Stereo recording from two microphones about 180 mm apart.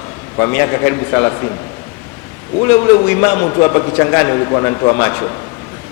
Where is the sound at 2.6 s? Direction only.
15° left (ahead or behind).